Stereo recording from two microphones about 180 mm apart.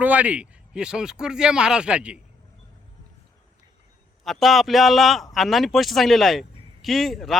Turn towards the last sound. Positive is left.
turn(degrees=0)  # may be behind; listen again after turning